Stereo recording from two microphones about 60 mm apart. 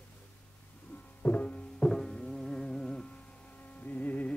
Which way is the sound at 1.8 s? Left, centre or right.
Centre.